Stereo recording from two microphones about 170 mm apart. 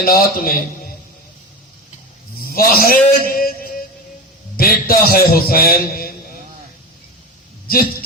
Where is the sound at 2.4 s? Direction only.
60° left (ahead or behind).